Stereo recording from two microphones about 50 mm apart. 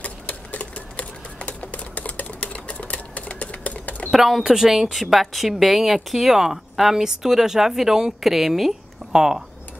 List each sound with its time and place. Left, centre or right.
0.0 s sewing machine: left
4.1 s a woman's voice: centre